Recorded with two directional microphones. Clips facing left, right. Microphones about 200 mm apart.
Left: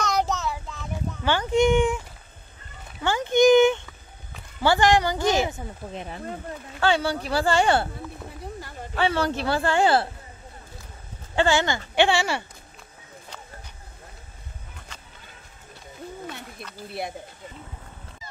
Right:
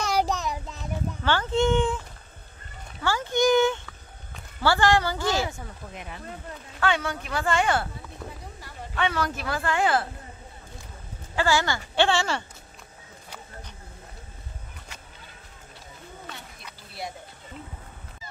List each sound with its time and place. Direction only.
0.0 s child singing: 10° right (ahead or behind)
1.2 s speech: 15° left (ahead or behind)
3.0 s a sound: 20° left (ahead or behind)
4.6 s speech: 20° left (ahead or behind)
5.9 s speech: 35° left (ahead or behind)
8.9 s speech: 30° left (ahead or behind)
11.3 s speech: 25° left (ahead or behind)